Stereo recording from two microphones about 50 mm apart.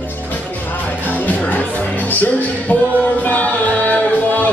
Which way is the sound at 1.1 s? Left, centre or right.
Left.